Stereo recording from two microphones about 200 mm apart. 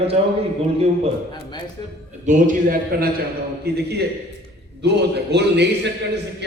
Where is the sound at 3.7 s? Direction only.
55° right (ahead or behind).